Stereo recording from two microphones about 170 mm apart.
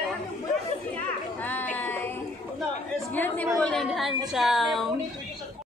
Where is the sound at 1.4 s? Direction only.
10° left (ahead or behind).